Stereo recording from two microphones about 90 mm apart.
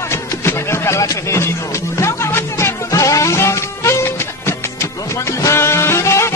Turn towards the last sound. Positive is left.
turn(degrees=30)  # may be behind; listen again after turning